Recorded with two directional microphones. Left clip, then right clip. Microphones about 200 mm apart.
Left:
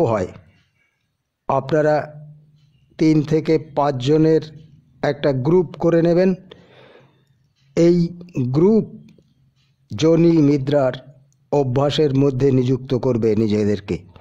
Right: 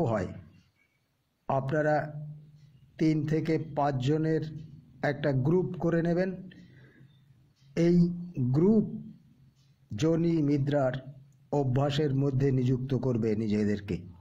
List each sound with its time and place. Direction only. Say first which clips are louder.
0.0 s a man's voice: left 12 dB; 30° left (ahead or behind)
1.4 s a man's voice: left 11 dB; 30° left (ahead or behind)
7.7 s a man's voice: left 11 dB; 35° left (ahead or behind)
9.8 s a man's voice: left 13 dB; 30° left (ahead or behind)